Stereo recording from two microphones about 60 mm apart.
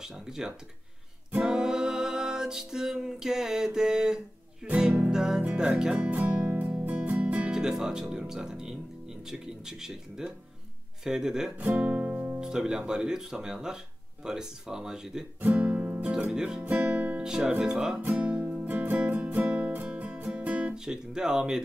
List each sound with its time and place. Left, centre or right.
0.0 s speech: centre
1.3 s music: centre
5.6 s speech: centre
6.0 s speech: right
6.4 s music: right
7.5 s speech: centre
11.5 s speech: right
15.5 s music: right
16.6 s speech: right
17.2 s speech: centre
18.0 s music: right
20.7 s speech: centre